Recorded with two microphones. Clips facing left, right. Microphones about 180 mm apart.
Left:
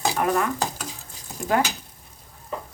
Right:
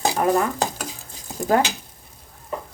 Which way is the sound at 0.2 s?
30° right (ahead or behind).